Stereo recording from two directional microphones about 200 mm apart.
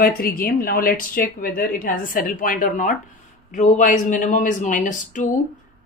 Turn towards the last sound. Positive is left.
turn(degrees=40)  # may be behind; listen again after turning